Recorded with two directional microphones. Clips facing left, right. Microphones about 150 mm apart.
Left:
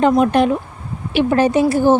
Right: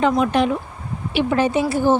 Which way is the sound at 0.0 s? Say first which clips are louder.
Left 4 dB; 45° left (ahead or behind).